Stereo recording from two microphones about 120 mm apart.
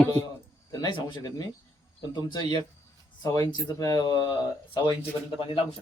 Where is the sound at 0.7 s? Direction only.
35° left (ahead or behind).